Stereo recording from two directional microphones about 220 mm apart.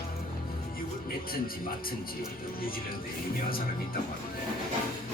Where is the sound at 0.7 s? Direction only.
40° left (ahead or behind).